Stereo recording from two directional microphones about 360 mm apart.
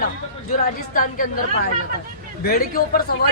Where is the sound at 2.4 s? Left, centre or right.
Left.